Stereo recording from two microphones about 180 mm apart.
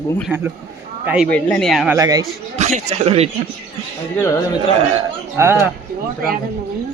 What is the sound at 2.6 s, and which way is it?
Speech, 40° right (ahead or behind).